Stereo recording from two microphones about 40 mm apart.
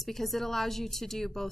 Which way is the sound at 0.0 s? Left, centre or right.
Centre.